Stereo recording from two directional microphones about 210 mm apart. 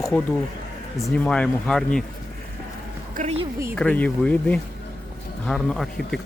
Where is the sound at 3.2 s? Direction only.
30° right (ahead or behind).